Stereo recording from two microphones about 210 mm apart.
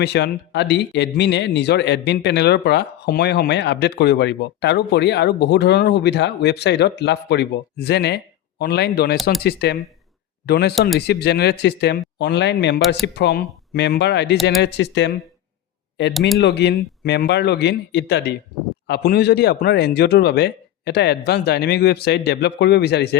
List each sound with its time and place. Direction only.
0.0 s speech: 55° left (ahead or behind)
10.8 s speech: centre (ahead or behind)
11.0 s speech: 50° left (ahead or behind)
16.4 s speech: 55° left (ahead or behind)